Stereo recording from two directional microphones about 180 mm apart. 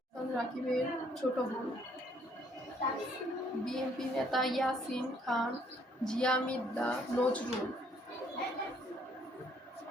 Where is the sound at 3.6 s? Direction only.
Centre (ahead or behind).